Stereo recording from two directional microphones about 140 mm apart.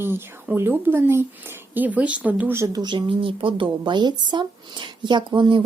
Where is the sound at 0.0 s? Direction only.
15° right (ahead or behind).